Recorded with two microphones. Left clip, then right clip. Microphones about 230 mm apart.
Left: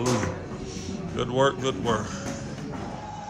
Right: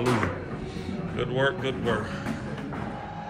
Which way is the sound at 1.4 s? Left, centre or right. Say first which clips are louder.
Left 3 dB; centre.